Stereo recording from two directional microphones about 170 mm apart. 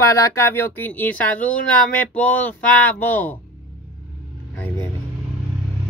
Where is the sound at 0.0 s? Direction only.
20° left (ahead or behind).